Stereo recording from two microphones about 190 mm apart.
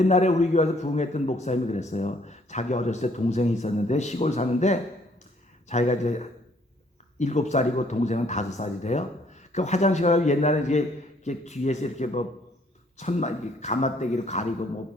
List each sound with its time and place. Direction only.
0.0 s a man's voice: 35° left (ahead or behind)